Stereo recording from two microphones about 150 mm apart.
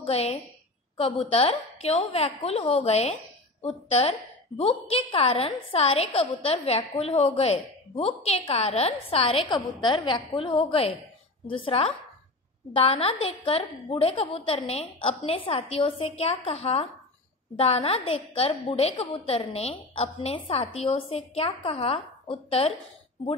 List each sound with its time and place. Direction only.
0.0 s a woman's voice: 40° left (ahead or behind)